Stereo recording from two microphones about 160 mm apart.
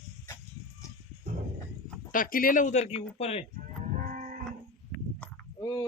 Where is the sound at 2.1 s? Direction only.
60° left (ahead or behind); by 3.5 s 40° left (ahead or behind).